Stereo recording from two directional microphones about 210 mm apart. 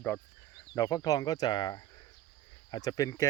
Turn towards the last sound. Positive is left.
turn(degrees=15)  # may be behind; listen again after turning